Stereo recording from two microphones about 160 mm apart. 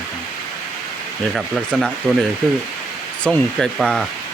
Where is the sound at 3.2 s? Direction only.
5° left (ahead or behind).